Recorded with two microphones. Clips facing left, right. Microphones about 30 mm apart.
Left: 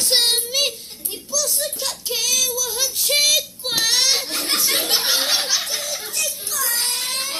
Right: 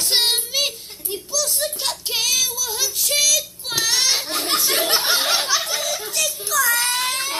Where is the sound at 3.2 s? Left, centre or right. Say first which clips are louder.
Left 2 dB; left.